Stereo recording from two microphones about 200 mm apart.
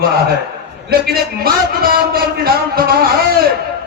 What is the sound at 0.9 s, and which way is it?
A man's voice, 50° right (ahead or behind).